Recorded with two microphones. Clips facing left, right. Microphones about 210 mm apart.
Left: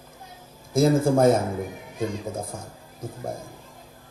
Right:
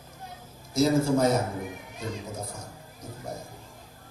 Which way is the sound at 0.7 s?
50° left (ahead or behind).